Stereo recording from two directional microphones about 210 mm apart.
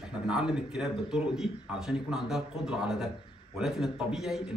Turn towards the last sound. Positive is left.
turn(degrees=0)  # may be behind; listen again after turning